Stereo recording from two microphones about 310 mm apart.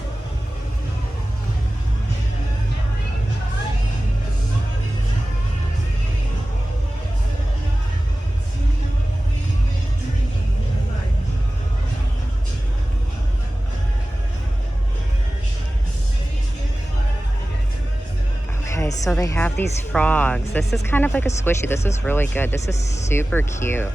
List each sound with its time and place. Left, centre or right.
18.8 s speech: centre